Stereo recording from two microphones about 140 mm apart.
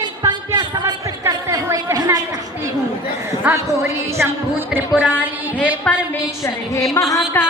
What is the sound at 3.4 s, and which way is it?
Speech, 20° right (ahead or behind).